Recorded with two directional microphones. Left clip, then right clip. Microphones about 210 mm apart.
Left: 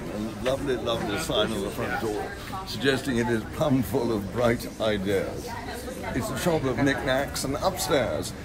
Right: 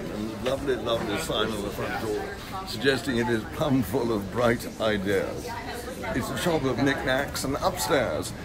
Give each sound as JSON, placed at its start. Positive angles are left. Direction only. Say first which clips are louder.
{"t": 0.7, "sound": "speech", "louder": "right 1 dB", "side_deg": 30}
{"t": 2.8, "sound": "speech", "louder": "right 1 dB", "side_deg": 20}
{"t": 3.2, "sound": "speech", "louder": "even", "side_deg": 5}